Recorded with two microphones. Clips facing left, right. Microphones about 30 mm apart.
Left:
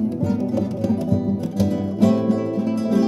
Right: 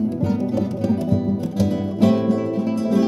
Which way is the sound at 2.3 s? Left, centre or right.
Centre.